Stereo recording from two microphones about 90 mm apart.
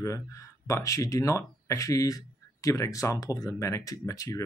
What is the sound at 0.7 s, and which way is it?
Speech, 35° left (ahead or behind).